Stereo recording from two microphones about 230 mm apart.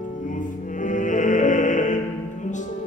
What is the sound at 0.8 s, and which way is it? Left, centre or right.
Music, left.